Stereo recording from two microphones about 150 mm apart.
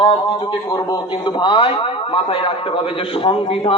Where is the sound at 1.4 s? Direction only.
35° left (ahead or behind).